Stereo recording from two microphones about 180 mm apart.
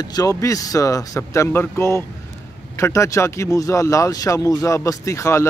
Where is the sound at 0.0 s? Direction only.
20° left (ahead or behind).